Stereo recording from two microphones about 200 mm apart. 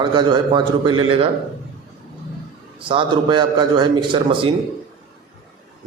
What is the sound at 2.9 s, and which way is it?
A man's voice, 25° right (ahead or behind).